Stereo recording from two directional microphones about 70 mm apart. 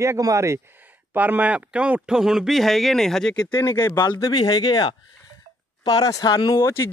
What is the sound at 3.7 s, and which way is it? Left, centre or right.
Speech, left.